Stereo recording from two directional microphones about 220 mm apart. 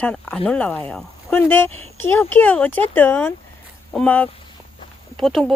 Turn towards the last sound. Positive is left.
turn(degrees=0)  # may be behind; listen again after turning